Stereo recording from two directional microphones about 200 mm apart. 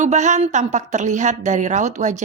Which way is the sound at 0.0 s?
35° right (ahead or behind).